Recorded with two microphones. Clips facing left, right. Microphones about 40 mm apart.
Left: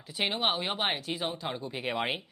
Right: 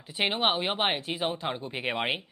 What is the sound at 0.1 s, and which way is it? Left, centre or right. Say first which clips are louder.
Speech: right 3 dB; right.